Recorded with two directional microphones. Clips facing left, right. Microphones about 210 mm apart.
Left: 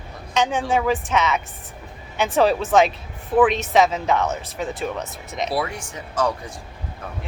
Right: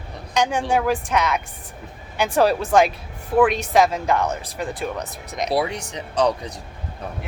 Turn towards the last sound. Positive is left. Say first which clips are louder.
# right 3 dB
turn(degrees=-20)  # may be behind; listen again after turning